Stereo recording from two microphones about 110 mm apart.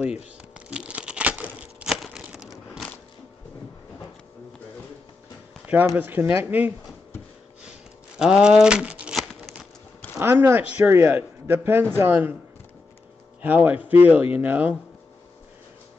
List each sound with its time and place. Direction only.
0.6 s crumpling: 10° right (ahead or behind)
2.0 s a sound: 5° right (ahead or behind)
5.9 s speech: 20° right (ahead or behind)
8.2 s speech: 5° right (ahead or behind)
9.3 s a sound: centre (ahead or behind)
10.1 s speech: 20° right (ahead or behind)
13.4 s speech: 15° right (ahead or behind)